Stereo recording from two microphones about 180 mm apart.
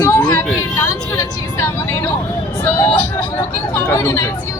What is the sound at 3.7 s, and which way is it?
Speech, 15° left (ahead or behind).